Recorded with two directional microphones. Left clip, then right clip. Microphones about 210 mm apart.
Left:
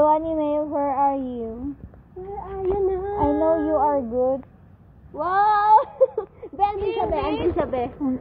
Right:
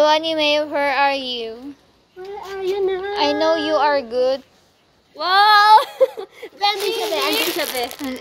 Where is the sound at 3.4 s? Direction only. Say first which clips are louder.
Right 2 dB; 50° right (ahead or behind).